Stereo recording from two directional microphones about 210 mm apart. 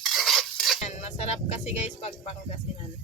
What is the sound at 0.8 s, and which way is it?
Music, 30° left (ahead or behind).